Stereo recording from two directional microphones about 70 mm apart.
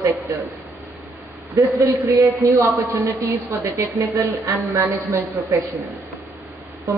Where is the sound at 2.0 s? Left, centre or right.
Right.